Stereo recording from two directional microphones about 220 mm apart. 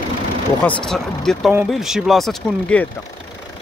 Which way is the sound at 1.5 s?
Centre (ahead or behind).